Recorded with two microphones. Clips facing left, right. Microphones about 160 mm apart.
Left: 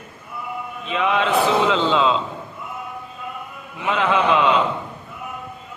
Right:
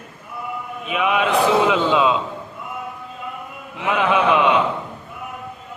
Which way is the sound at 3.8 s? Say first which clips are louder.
Right 1 dB; 15° right (ahead or behind).